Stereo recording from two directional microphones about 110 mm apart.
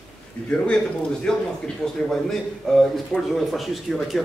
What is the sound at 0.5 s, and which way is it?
Speech, 5° left (ahead or behind).